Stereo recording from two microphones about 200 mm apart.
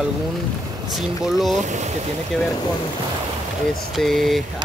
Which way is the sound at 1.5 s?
35° right (ahead or behind).